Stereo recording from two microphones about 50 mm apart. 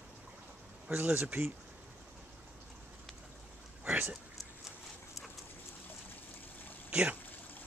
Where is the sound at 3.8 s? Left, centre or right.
Right.